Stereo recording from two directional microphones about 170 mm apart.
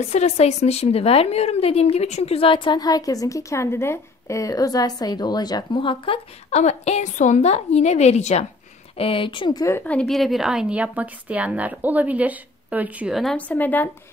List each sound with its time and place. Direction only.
0.1 s a woman's voice: 40° left (ahead or behind); by 13.8 s 10° left (ahead or behind)